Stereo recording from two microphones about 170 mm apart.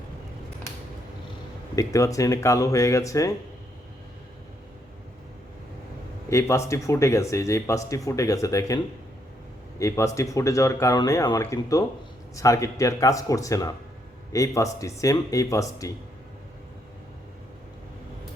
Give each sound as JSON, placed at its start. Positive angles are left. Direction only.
{"t": 1.7, "sound": "speech", "side_deg": 20}
{"t": 6.2, "sound": "a man's voice", "side_deg": 15}